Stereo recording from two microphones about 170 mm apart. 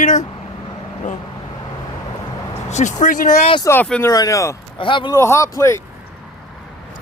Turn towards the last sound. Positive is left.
turn(degrees=15)  # may be behind; listen again after turning